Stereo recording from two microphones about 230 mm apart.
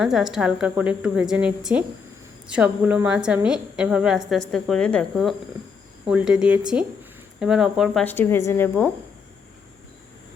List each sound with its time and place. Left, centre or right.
0.0 s a woman's voice: centre